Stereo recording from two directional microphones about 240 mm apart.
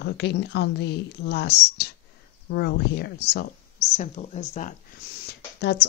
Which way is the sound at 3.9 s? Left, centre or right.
Left.